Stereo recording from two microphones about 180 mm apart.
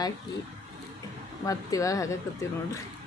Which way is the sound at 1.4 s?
20° left (ahead or behind).